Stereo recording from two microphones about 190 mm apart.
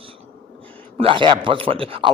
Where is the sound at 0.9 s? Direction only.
30° right (ahead or behind).